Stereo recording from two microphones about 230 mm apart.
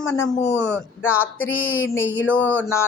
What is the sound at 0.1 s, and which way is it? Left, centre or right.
A woman's voice, centre.